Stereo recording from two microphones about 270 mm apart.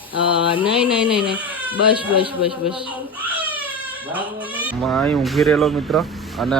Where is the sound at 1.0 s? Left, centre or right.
Centre.